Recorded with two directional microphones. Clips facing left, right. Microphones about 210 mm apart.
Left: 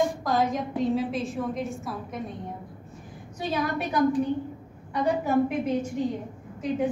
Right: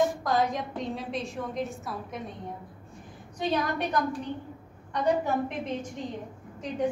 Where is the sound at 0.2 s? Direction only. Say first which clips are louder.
Left 2 dB; centre (ahead or behind).